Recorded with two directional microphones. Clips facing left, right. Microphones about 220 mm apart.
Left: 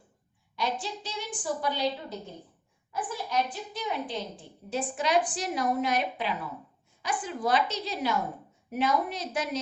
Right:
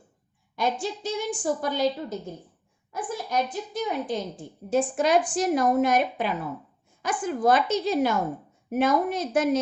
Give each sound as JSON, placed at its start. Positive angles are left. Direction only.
{"t": 0.5, "sound": "a woman's voice", "side_deg": -50}